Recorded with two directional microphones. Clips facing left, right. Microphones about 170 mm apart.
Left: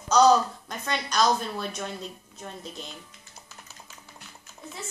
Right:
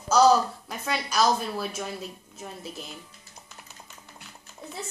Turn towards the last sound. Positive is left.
turn(degrees=-5)  # may be behind; listen again after turning